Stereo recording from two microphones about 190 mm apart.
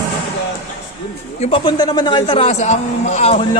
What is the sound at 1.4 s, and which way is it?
Speech, 30° left (ahead or behind).